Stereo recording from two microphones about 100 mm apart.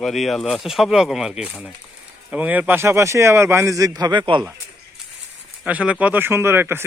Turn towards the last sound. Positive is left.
turn(degrees=-25)  # may be behind; listen again after turning